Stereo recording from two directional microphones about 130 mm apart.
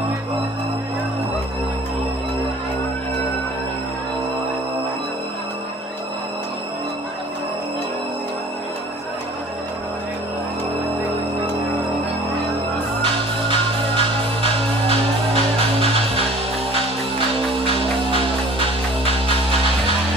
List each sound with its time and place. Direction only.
13.0 s music: 40° right (ahead or behind)